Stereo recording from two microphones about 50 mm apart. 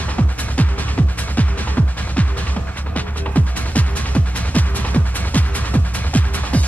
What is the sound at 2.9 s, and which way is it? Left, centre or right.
Music, left.